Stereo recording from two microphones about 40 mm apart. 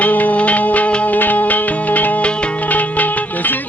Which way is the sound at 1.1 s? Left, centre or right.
Left.